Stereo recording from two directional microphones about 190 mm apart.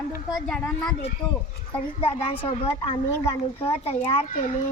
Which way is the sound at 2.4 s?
30° left (ahead or behind).